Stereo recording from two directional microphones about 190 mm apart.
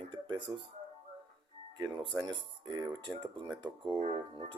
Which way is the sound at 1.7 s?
20° right (ahead or behind).